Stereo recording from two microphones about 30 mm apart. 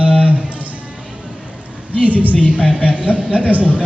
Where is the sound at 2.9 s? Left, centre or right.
Right.